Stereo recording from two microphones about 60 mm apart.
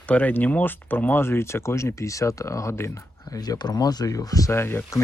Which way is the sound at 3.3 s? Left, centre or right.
Left.